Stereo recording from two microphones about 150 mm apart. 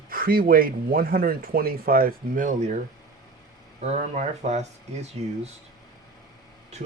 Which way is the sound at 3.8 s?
50° right (ahead or behind).